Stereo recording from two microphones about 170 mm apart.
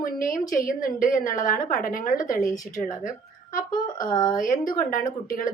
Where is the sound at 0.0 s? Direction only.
55° left (ahead or behind).